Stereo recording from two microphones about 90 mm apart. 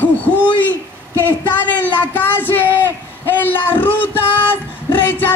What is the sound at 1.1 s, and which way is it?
Speech, 20° left (ahead or behind).